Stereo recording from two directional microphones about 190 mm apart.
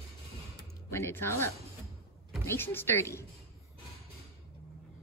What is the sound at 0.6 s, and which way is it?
Music, 10° left (ahead or behind).